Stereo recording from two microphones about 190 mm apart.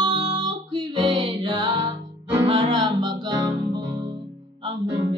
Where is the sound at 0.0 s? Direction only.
25° right (ahead or behind).